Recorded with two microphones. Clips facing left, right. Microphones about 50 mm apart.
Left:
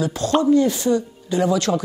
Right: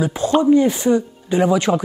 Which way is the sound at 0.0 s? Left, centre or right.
Centre.